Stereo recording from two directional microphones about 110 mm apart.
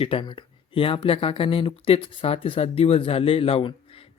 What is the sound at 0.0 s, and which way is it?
Speech, 55° left (ahead or behind).